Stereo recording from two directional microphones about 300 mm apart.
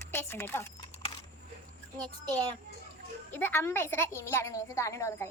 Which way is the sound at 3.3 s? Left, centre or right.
Centre.